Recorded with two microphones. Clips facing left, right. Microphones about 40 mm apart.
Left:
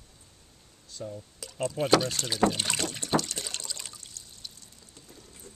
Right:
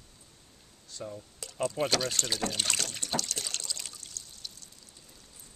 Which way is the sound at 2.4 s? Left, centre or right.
Centre.